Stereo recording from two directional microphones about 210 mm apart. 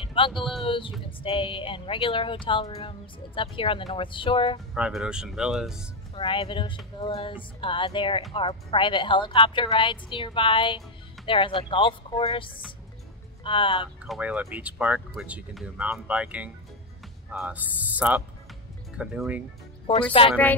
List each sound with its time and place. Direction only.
0.0 s a sound: 25° left (ahead or behind)
0.7 s speech: 25° left (ahead or behind)
4.7 s speech: 5° right (ahead or behind)
6.1 s speech: 25° left (ahead or behind)
14.0 s speech: 5° right (ahead or behind)
19.9 s speech: 25° left (ahead or behind)